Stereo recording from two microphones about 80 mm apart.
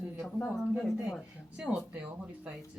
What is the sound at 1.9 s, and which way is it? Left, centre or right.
Speech, centre.